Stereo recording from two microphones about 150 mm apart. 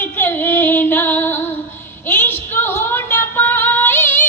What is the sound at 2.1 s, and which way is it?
Female singing, 15° left (ahead or behind).